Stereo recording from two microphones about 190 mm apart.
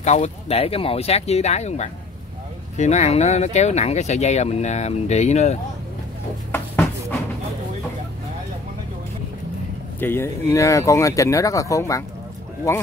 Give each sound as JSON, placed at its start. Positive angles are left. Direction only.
{"t": 0.0, "sound": "speech", "side_deg": 35}
{"t": 6.5, "sound": "a sound", "side_deg": 10}
{"t": 9.9, "sound": "speech", "side_deg": 10}